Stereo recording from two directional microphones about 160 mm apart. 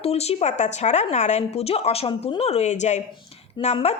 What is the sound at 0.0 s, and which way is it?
A woman's voice, 40° left (ahead or behind).